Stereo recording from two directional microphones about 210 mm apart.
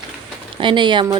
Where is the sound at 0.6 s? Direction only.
20° right (ahead or behind).